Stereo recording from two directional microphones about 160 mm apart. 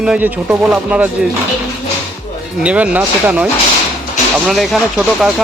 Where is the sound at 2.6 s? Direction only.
10° right (ahead or behind).